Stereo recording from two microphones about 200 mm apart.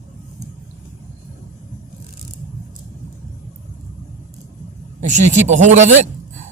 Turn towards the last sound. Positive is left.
turn(degrees=-35)  # may be behind; listen again after turning